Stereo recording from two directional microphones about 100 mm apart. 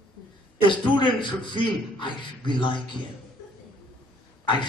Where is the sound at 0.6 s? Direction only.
50° left (ahead or behind).